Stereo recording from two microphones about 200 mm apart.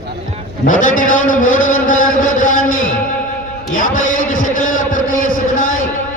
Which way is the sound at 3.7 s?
40° left (ahead or behind).